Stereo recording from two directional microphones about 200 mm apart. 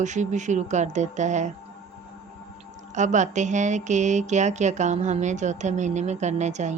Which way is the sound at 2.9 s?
35° right (ahead or behind).